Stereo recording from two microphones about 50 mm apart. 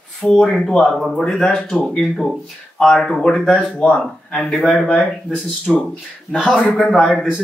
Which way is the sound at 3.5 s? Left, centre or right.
Left.